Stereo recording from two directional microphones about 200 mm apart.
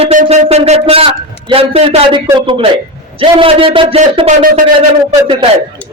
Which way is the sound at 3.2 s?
25° right (ahead or behind).